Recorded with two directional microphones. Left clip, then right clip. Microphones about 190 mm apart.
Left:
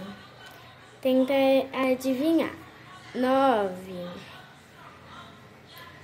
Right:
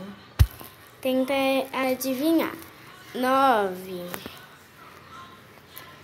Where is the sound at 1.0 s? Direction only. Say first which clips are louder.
Left 2 dB; 20° left (ahead or behind).